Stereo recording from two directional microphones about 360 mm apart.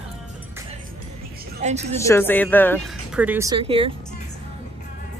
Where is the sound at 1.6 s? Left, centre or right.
Centre.